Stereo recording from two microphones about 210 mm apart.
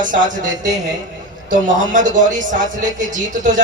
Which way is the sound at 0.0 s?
40° right (ahead or behind).